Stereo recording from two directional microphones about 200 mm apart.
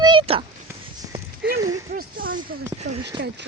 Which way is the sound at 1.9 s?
45° right (ahead or behind).